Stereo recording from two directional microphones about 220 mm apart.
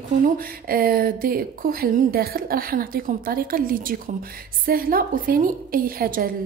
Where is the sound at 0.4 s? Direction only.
40° right (ahead or behind).